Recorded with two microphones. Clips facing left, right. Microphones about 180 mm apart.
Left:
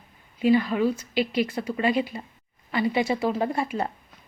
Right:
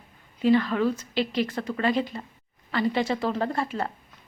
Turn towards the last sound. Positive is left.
turn(degrees=15)  # may be behind; listen again after turning